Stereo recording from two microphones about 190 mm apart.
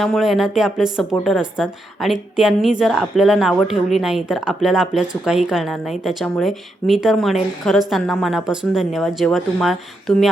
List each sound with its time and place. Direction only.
0.0 s speech: centre (ahead or behind)